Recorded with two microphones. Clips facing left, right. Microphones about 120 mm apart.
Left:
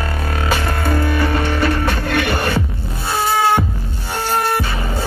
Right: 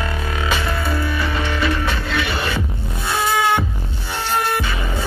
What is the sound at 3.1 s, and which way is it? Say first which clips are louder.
Music: left 2 dB; 35° left (ahead or behind).